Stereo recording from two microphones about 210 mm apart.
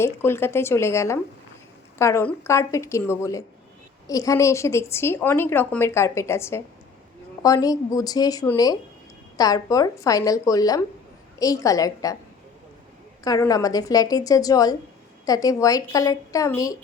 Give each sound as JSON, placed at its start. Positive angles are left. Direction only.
{"t": 0.0, "sound": "a woman's voice", "side_deg": 10}
{"t": 13.2, "sound": "a woman's voice", "side_deg": 15}